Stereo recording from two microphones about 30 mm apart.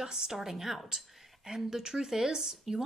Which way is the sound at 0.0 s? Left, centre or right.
Centre.